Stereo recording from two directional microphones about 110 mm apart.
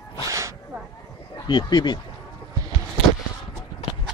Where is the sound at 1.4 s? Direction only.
40° left (ahead or behind).